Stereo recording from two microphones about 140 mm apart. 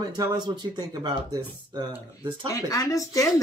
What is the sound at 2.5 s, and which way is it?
Speech, 25° left (ahead or behind).